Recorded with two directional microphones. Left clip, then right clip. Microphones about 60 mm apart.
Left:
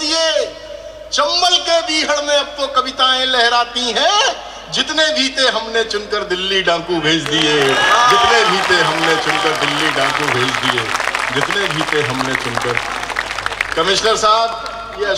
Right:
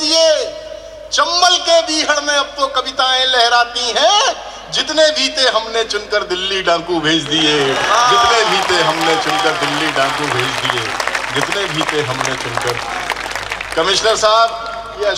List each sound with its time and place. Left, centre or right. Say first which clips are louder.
0.1 s a sound: right 4 dB; right
1.1 s a man's voice: right 1 dB; right
7.5 s a man's voice: left 4 dB; left
8.1 s a man's voice: even; right
13.7 s a man's voice: right 2 dB; right